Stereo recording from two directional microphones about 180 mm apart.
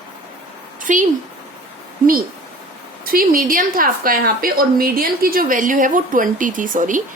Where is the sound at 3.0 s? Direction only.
50° right (ahead or behind).